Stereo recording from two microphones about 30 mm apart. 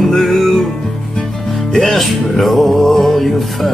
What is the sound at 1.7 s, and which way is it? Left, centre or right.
Music, centre.